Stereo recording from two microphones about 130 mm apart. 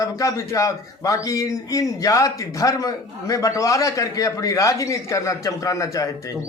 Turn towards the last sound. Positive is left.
turn(degrees=25)  # may be behind; listen again after turning